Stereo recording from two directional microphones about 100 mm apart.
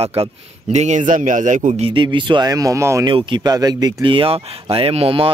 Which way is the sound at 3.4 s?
40° right (ahead or behind).